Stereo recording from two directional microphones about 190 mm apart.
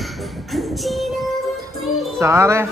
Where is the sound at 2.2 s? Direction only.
15° right (ahead or behind).